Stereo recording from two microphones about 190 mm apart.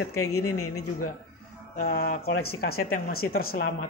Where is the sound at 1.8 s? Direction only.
50° left (ahead or behind).